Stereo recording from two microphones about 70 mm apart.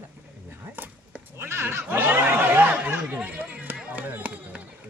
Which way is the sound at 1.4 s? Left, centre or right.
Right.